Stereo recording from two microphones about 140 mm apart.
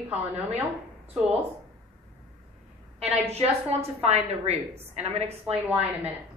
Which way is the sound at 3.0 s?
45° right (ahead or behind).